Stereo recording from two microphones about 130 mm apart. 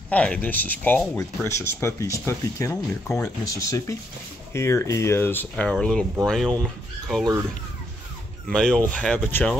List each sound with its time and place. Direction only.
0.1 s speech: 10° left (ahead or behind)
8.5 s speech: 5° left (ahead or behind)